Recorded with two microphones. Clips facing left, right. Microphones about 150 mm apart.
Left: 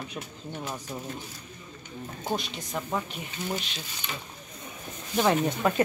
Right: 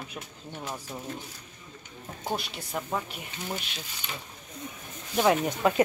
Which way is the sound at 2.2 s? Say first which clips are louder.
Left 1 dB; 10° right (ahead or behind).